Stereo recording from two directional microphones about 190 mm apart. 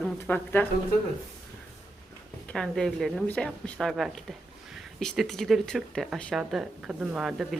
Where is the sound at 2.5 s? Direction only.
5° left (ahead or behind).